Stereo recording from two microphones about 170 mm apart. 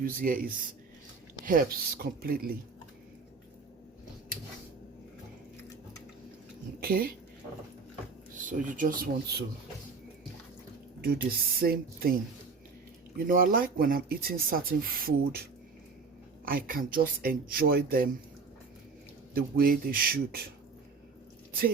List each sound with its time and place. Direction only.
0.0 s speech: 55° right (ahead or behind)
6.7 s speech: 60° right (ahead or behind)
8.4 s speech: 50° right (ahead or behind)
11.0 s speech: 65° right (ahead or behind)
16.5 s speech: 55° right (ahead or behind)
19.3 s speech: 60° right (ahead or behind)